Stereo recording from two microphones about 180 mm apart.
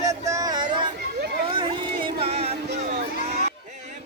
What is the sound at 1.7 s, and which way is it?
Music, 25° right (ahead or behind).